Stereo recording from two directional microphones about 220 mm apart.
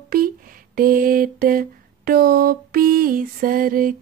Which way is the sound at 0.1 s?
40° right (ahead or behind).